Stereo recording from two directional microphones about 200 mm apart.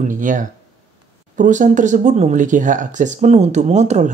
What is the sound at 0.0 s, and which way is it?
Speech, 40° right (ahead or behind).